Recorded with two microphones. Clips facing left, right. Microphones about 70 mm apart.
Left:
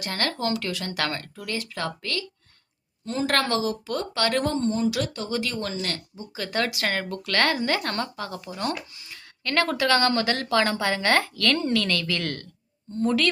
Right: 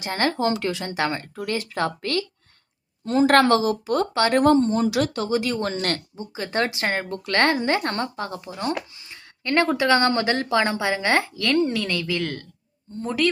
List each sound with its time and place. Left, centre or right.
0.0 s speech: right
4.7 s speech: right
5.3 s speech: right
5.7 s speech: right
6.3 s speech: right